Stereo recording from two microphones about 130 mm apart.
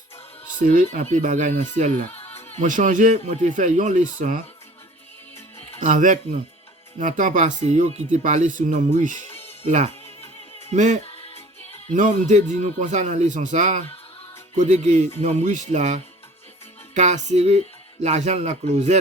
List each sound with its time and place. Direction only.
0.6 s speech: 80° right
5.8 s speech: 80° right
9.6 s speech: 55° right (ahead or behind)
10.7 s speech: 65° right (ahead or behind)
11.0 s music: 50° left (ahead or behind)
11.9 s speech: 75° right (ahead or behind)